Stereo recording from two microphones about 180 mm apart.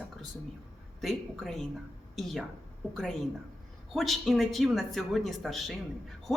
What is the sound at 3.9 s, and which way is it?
A woman's voice, centre (ahead or behind).